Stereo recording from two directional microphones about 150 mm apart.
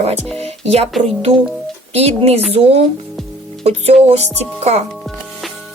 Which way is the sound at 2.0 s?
45° right (ahead or behind).